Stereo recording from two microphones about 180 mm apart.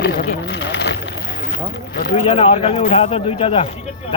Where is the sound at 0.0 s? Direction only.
55° left (ahead or behind); by 0.9 s 75° left (ahead or behind).